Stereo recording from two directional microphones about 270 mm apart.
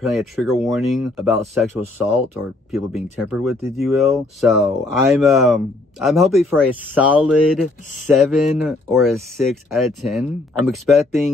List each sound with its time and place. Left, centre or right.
0.0 s speech: centre